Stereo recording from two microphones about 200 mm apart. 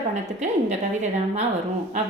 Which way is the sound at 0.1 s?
35° right (ahead or behind).